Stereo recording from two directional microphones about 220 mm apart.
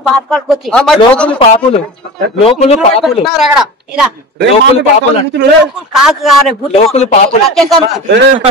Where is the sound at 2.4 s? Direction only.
30° left (ahead or behind).